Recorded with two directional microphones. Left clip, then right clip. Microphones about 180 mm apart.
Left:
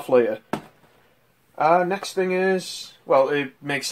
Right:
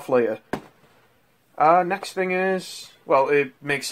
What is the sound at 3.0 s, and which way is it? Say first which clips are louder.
Speech: even; 25° right (ahead or behind).